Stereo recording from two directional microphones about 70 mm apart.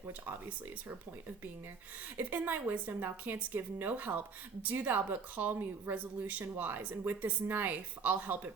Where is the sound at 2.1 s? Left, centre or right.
Right.